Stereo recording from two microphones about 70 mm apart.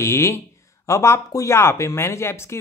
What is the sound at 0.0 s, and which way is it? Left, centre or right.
Speech, left.